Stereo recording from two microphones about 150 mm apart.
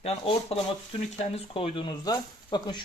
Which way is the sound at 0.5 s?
40° left (ahead or behind).